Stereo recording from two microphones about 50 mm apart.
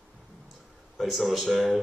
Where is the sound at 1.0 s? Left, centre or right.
Centre.